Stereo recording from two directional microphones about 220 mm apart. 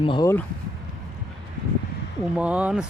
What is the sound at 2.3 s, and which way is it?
Speech, 5° right (ahead or behind).